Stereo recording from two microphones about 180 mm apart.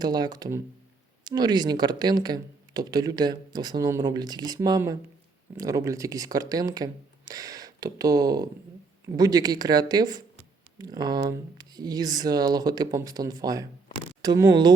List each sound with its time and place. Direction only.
0.0 s speech: 20° right (ahead or behind)